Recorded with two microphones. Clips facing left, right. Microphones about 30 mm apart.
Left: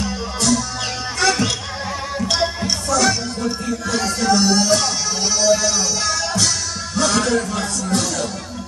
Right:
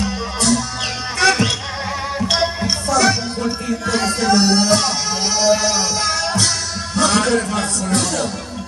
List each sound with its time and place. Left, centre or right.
0.0 s music: centre
7.0 s a man's voice: centre